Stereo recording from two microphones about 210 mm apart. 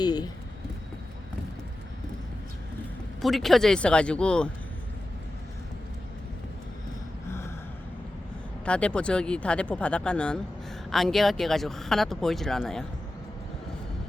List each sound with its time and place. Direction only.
0.0 s a sound: 20° left (ahead or behind)
3.2 s speech: centre (ahead or behind)
7.3 s gasp: 10° left (ahead or behind)
8.6 s speech: 5° left (ahead or behind)